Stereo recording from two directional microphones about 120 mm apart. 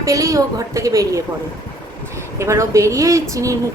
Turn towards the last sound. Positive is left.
turn(degrees=-25)  # may be behind; listen again after turning